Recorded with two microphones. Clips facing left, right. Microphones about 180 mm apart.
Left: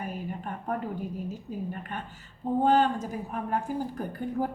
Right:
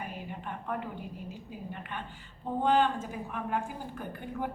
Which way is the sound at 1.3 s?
45° left (ahead or behind).